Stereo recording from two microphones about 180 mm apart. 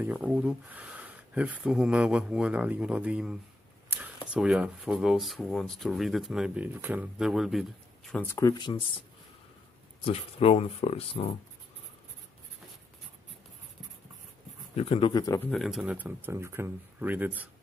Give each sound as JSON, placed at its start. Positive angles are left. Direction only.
{"t": 0.0, "sound": "speech", "side_deg": -10}
{"t": 8.4, "sound": "speech", "side_deg": 20}
{"t": 10.0, "sound": "speech", "side_deg": 35}
{"t": 14.8, "sound": "speech", "side_deg": 30}
{"t": 15.5, "sound": "speech", "side_deg": 0}